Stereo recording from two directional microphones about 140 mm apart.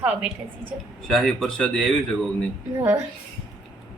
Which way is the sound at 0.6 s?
5° left (ahead or behind).